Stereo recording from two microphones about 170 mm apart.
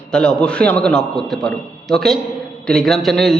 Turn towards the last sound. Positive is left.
turn(degrees=0)  # may be behind; listen again after turning